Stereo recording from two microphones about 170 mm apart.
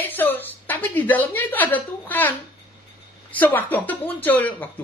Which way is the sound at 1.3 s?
10° left (ahead or behind).